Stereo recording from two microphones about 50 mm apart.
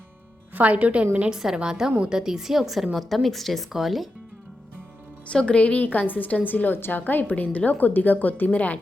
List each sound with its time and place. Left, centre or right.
0.5 s speech: right
1.3 s a woman's voice: centre
5.3 s a woman's voice: left
5.8 s a woman's voice: left